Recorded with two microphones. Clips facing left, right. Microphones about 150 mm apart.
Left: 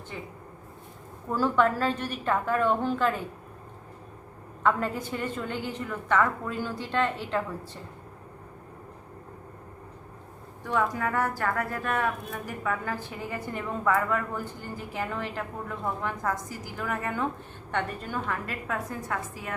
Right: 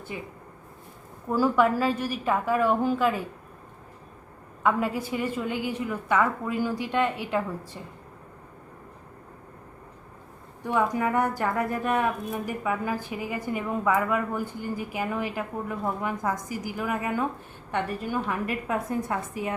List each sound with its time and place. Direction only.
0.1 s a woman's voice: 10° right (ahead or behind)
1.3 s a woman's voice: 10° right (ahead or behind)
4.6 s a woman's voice: 10° right (ahead or behind)
10.6 s a woman's voice: 15° right (ahead or behind)